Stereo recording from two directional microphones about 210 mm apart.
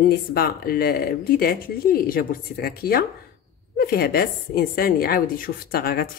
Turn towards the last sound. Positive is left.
turn(degrees=45)  # may be behind; listen again after turning